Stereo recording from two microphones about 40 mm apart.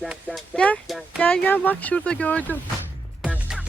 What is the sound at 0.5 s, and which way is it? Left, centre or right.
Speech, centre.